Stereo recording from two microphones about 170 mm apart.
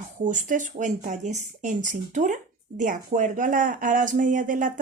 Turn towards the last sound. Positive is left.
turn(degrees=-50)  # may be behind; listen again after turning